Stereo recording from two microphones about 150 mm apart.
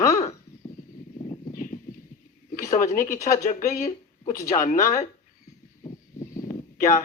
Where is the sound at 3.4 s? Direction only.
50° left (ahead or behind).